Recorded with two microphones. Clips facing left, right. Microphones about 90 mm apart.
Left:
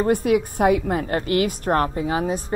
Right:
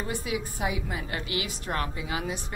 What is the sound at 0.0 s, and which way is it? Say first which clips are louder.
A woman's voice: left 13 dB; 55° left (ahead or behind).